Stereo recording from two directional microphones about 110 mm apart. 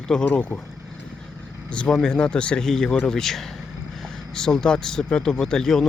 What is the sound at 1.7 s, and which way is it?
Speech, 5° left (ahead or behind).